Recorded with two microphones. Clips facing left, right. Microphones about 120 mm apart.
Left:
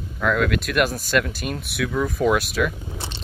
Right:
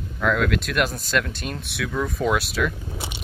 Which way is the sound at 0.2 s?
Centre (ahead or behind).